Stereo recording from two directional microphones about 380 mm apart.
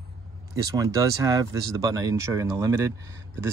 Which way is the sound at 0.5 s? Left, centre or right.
Centre.